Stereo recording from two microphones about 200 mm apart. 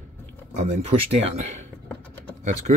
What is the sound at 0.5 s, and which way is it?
Speech, 35° right (ahead or behind).